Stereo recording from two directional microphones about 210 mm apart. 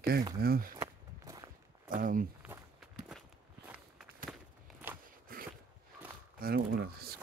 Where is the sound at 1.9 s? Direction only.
40° right (ahead or behind).